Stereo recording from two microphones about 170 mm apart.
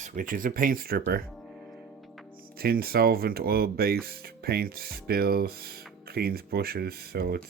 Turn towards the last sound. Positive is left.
turn(degrees=-65)  # may be behind; listen again after turning